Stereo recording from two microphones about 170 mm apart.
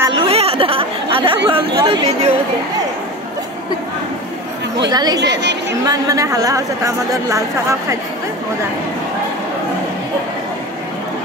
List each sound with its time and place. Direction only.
0.1 s speech: 35° right (ahead or behind)
4.8 s a woman's voice: 25° right (ahead or behind)
5.2 s a woman's voice: 90° right
5.9 s a woman's voice: 20° right (ahead or behind)